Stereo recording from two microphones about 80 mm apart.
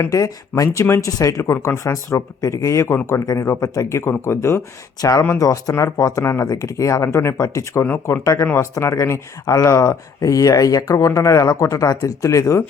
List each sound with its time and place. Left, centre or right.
0.0 s speech: left
4.9 s speech: left